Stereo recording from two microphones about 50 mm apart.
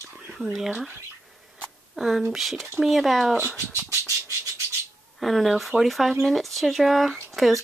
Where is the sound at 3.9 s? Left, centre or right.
Right.